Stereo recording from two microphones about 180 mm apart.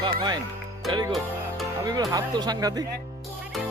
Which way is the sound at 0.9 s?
25° right (ahead or behind).